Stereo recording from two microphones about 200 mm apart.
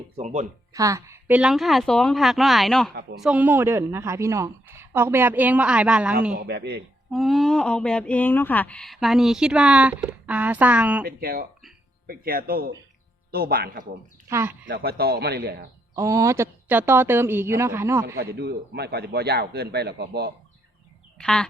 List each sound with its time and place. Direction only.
0.2 s speech: 35° right (ahead or behind)
0.7 s a woman's voice: 15° right (ahead or behind)
6.4 s a man's voice: 55° right (ahead or behind)
7.1 s speech: centre (ahead or behind)
11.0 s a man's voice: 50° right (ahead or behind)
14.3 s a woman's voice: 10° right (ahead or behind)
14.7 s a man's voice: 50° right (ahead or behind)
16.0 s a woman's voice: 15° right (ahead or behind)
18.2 s a man's voice: 50° right (ahead or behind)
21.2 s duck: 5° left (ahead or behind)